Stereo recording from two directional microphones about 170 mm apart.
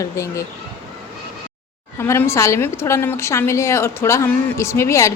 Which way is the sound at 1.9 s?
15° left (ahead or behind).